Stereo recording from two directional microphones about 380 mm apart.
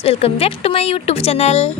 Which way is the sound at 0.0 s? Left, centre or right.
Centre.